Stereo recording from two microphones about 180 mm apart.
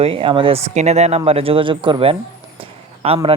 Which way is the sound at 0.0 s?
30° right (ahead or behind).